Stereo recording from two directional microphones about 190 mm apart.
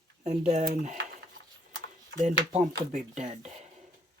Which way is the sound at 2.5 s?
40° right (ahead or behind).